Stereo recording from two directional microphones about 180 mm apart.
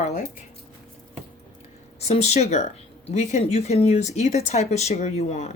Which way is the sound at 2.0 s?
35° left (ahead or behind).